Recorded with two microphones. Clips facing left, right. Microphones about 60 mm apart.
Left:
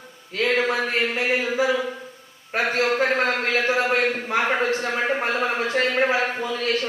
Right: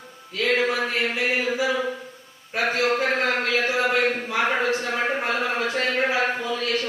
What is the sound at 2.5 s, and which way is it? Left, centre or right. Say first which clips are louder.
Speech: left 1 dB; left.